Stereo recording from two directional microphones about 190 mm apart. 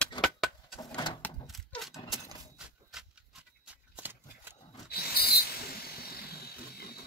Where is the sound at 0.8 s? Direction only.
25° left (ahead or behind).